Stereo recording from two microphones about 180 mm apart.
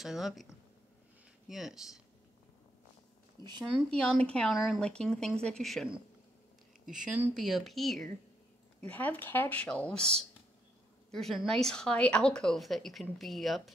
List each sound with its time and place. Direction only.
0.0 s a woman's voice: centre (ahead or behind)
1.5 s a woman's voice: centre (ahead or behind)
3.4 s speech: 25° right (ahead or behind)
4.0 s a woman's voice: 5° left (ahead or behind)